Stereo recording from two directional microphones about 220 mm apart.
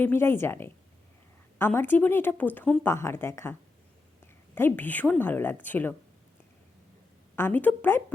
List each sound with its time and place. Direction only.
0.0 s speech: 10° left (ahead or behind)
4.5 s speech: 10° left (ahead or behind)
7.3 s speech: 10° left (ahead or behind)